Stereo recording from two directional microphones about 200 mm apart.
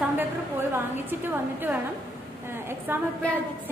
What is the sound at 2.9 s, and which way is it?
Speech, 10° right (ahead or behind).